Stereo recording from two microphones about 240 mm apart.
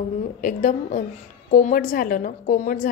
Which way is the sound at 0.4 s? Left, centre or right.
Left.